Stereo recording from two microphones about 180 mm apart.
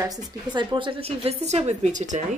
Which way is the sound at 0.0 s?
20° right (ahead or behind).